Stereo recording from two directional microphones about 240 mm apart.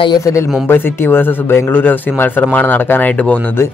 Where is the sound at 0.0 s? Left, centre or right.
Centre.